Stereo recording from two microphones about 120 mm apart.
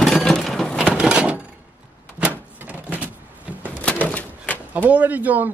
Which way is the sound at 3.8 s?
10° left (ahead or behind).